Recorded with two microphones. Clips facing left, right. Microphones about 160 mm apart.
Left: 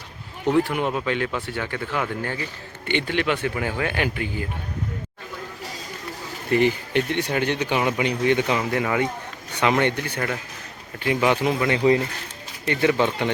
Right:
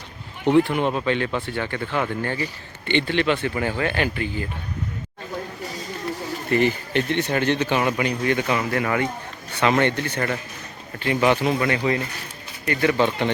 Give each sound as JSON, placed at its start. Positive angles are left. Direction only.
{"t": 0.6, "sound": "speech", "side_deg": 5}
{"t": 6.5, "sound": "speech", "side_deg": 15}